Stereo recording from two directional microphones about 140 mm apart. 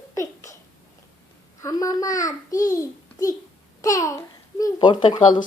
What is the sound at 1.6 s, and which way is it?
A child's voice, 25° left (ahead or behind).